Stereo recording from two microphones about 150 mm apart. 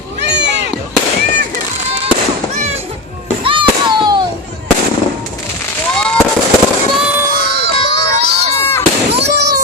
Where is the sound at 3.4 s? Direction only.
35° right (ahead or behind).